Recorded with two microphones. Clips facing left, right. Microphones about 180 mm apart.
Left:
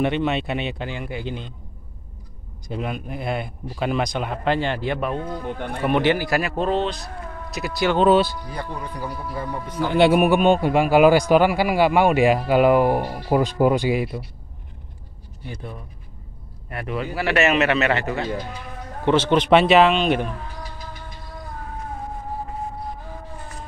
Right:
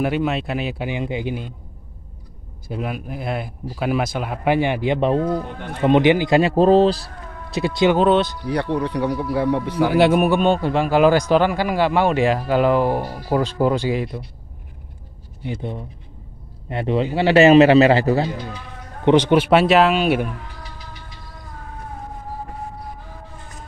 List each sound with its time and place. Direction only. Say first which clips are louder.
0.0 s speech: right 1 dB; 5° right (ahead or behind)
0.8 s a man's voice: right 5 dB; 15° right (ahead or behind)
2.7 s speech: right 1 dB; 5° right (ahead or behind)
5.0 s a man's voice: right 8 dB; 35° right (ahead or behind)
5.8 s speech: right 5 dB; 20° right (ahead or behind)
6.5 s a man's voice: right 9 dB; 35° right (ahead or behind)
7.5 s speech: right 5 dB; 25° right (ahead or behind)
8.0 s speech: even; 5° left (ahead or behind)
8.5 s speech: right 10 dB; 70° right (ahead or behind)
10.1 s a man's voice: even; 10° left (ahead or behind)
15.4 s a man's voice: right 7 dB; 25° right (ahead or behind)
19.0 s a man's voice: right 3 dB; 15° right (ahead or behind)